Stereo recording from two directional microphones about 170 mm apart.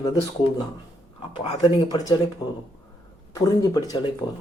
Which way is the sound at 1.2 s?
30° left (ahead or behind).